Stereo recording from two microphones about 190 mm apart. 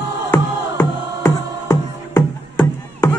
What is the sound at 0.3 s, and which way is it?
Music, 10° left (ahead or behind).